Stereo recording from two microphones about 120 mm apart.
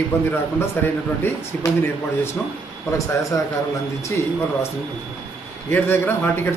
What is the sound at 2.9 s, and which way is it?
Speech, 30° left (ahead or behind).